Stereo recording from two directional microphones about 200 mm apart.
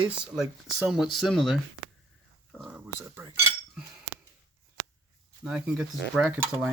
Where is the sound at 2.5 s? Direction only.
5° right (ahead or behind).